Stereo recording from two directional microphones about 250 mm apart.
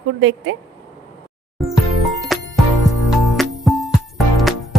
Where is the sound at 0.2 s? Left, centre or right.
Right.